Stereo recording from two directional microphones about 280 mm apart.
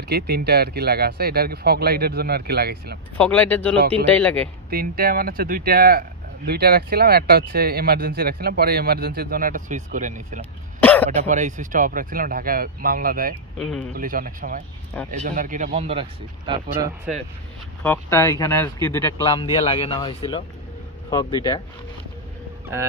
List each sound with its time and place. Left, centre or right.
0.1 s speech: right
3.2 s speech: centre
4.6 s speech: right
10.8 s throat clearing: centre
11.1 s speech: right
13.6 s speech: centre
13.9 s speech: right
17.8 s speech: centre